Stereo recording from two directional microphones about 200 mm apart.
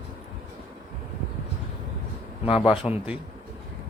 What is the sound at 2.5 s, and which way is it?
Speech, 25° left (ahead or behind).